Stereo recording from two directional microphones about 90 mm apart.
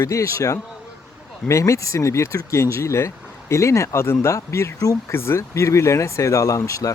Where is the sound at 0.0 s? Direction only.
35° left (ahead or behind).